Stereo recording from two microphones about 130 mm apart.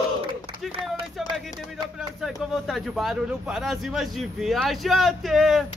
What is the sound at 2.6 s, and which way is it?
A man's voice, centre (ahead or behind).